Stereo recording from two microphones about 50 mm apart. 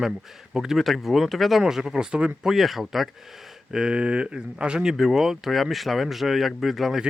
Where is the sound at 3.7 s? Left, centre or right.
Centre.